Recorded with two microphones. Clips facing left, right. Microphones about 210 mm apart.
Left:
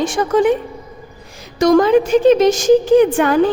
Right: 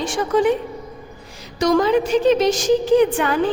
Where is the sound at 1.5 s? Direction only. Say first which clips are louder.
Left 5 dB; 50° left (ahead or behind).